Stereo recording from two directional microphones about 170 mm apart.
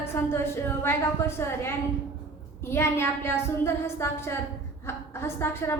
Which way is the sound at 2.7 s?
15° left (ahead or behind).